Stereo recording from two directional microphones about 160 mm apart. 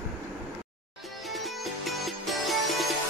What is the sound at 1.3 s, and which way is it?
Music, centre (ahead or behind).